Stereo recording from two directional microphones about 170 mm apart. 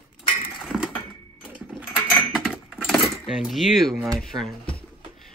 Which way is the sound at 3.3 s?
Centre (ahead or behind).